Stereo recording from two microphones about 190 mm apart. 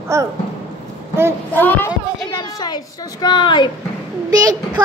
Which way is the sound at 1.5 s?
10° left (ahead or behind).